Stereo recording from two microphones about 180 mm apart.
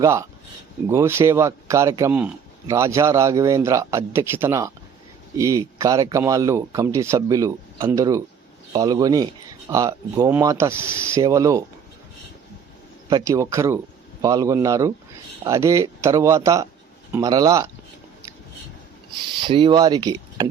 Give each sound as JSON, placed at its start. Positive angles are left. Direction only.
{"t": 0.0, "sound": "speech", "side_deg": -15}
{"t": 13.1, "sound": "speech", "side_deg": -20}
{"t": 19.4, "sound": "speech", "side_deg": -30}